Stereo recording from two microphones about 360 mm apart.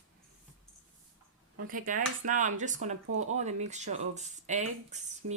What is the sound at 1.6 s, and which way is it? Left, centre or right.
Speech, right.